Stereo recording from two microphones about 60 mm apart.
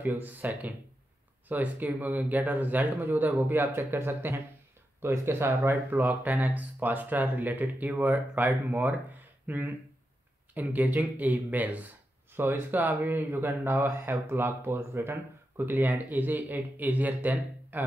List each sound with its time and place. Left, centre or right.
0.0 s speech: right
1.5 s speech: right
5.9 s speech: right